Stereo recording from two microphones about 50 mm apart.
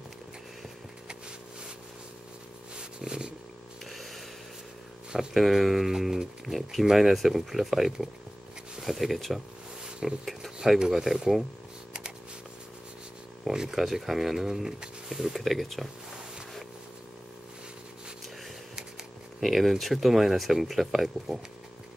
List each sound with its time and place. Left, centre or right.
2.8 s purr: centre
3.8 s chainsaw: centre
5.3 s speech: centre
13.5 s speech: centre
19.4 s speech: centre